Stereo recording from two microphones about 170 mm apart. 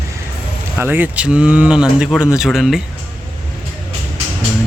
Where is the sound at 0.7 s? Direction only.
10° right (ahead or behind).